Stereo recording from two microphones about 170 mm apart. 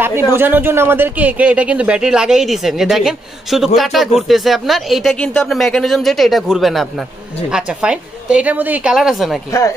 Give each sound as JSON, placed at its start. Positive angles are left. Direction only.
{"t": 0.3, "sound": "speech", "side_deg": -10}
{"t": 9.5, "sound": "speech", "side_deg": 20}